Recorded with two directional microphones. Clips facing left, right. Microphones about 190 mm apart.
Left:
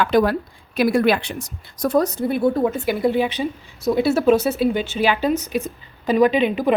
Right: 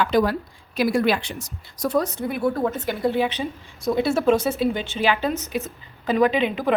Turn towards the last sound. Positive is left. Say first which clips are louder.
# left 3 dB
turn(degrees=15)  # may be behind; listen again after turning